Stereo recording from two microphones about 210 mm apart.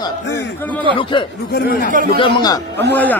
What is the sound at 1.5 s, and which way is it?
Speech, 45° left (ahead or behind).